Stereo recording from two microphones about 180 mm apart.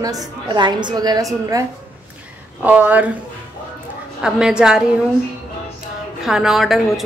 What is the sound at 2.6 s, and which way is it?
Speech, 10° right (ahead or behind).